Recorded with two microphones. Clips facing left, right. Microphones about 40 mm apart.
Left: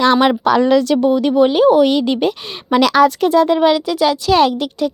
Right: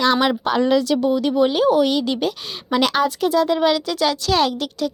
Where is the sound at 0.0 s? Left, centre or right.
Left.